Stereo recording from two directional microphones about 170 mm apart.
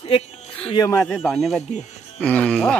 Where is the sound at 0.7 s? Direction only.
20° left (ahead or behind).